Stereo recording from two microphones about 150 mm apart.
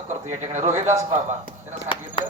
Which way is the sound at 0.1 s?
55° right (ahead or behind).